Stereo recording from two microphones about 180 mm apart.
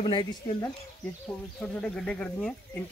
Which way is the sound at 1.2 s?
5° left (ahead or behind).